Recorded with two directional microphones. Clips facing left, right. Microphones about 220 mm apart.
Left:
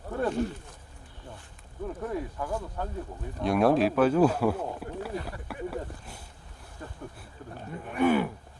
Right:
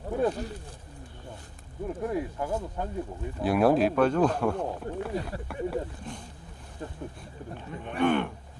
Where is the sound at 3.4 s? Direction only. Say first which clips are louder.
Right 1 dB; centre (ahead or behind).